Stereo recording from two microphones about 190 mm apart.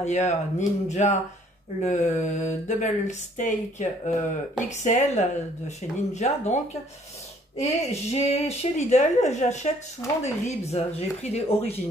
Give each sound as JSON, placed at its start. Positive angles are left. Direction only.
{"t": 0.0, "sound": "speech", "side_deg": 35}